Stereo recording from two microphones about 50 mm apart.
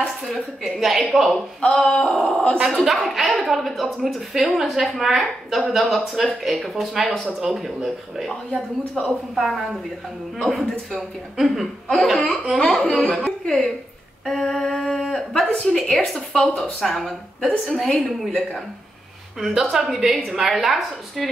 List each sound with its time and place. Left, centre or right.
0.3 s a woman's voice: centre
1.6 s speech: centre
2.1 s a woman's voice: centre
12.8 s a woman's voice: left
13.2 s a woman's voice: centre
19.4 s speech: centre